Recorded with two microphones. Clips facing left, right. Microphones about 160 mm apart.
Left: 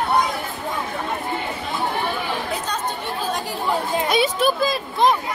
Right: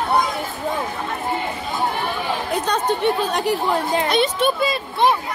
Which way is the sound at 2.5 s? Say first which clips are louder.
Right 6 dB; 65° right (ahead or behind).